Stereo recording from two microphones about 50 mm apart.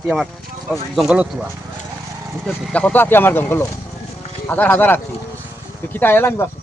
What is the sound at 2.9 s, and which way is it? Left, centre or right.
A man's voice, left.